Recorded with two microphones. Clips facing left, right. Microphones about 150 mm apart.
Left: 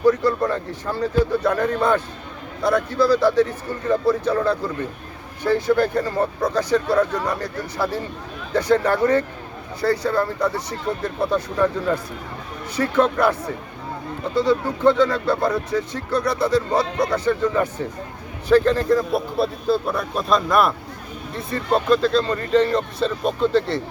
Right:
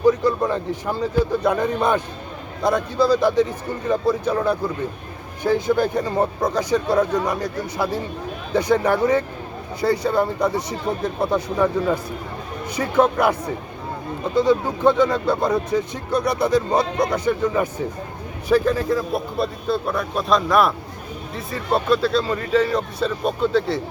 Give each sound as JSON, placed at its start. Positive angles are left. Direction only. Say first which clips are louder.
{"t": 0.0, "sound": "speech", "louder": "even", "side_deg": -15}
{"t": 14.3, "sound": "speech", "louder": "right 2 dB", "side_deg": -15}